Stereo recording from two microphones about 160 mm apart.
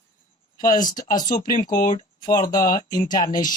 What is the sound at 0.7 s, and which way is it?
Speech, 25° left (ahead or behind).